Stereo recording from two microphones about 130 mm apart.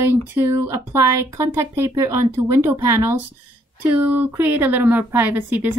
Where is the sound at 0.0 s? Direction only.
20° right (ahead or behind).